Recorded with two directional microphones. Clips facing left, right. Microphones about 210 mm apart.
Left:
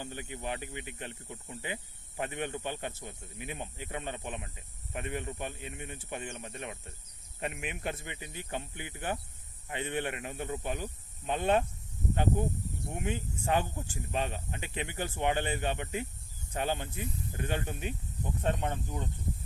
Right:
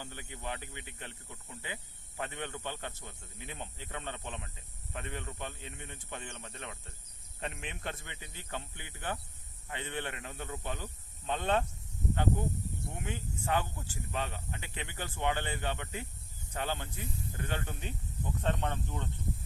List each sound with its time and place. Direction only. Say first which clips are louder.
0.0 s speech: left 4 dB; 15° left (ahead or behind)
12.9 s speech: left 8 dB; 15° left (ahead or behind)